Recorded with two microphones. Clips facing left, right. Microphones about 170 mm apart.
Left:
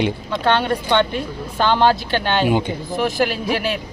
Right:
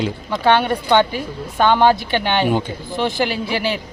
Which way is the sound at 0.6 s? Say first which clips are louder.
Right 2 dB; 5° right (ahead or behind).